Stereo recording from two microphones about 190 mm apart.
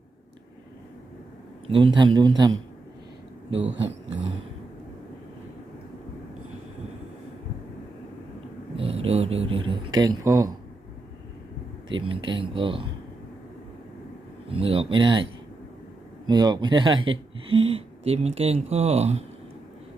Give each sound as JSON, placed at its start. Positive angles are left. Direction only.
{"t": 1.6, "sound": "speech", "side_deg": -25}
{"t": 3.8, "sound": "speech", "side_deg": -75}
{"t": 8.7, "sound": "a sound", "side_deg": -30}
{"t": 10.2, "sound": "speech", "side_deg": -20}
{"t": 11.9, "sound": "speech", "side_deg": -25}
{"t": 14.4, "sound": "speech", "side_deg": -30}
{"t": 16.3, "sound": "speech", "side_deg": -20}